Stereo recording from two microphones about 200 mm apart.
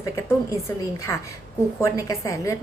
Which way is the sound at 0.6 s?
15° left (ahead or behind).